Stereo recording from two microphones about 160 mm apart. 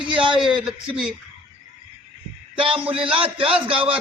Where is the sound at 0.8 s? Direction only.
5° right (ahead or behind).